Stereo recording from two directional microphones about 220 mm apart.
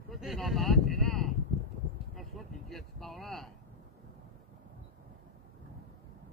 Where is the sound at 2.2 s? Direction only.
Centre (ahead or behind).